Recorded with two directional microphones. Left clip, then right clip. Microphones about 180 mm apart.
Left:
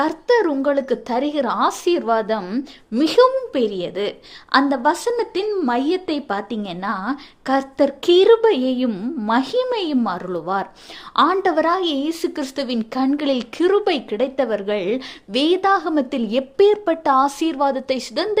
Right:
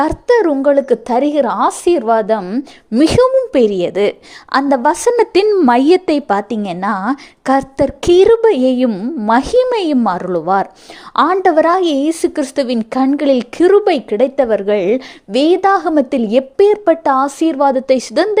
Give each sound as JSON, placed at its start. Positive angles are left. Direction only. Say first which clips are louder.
{"t": 0.0, "sound": "a woman's voice", "louder": "right 5 dB", "side_deg": -35}
{"t": 3.0, "sound": "a woman's voice", "louder": "right 4 dB", "side_deg": -40}